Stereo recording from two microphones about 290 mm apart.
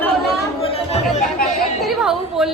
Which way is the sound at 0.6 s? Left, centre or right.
Centre.